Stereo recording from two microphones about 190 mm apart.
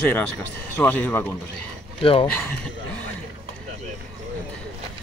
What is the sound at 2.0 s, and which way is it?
Speech, 30° left (ahead or behind).